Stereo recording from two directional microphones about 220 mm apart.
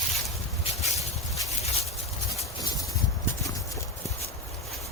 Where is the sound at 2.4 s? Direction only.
15° left (ahead or behind).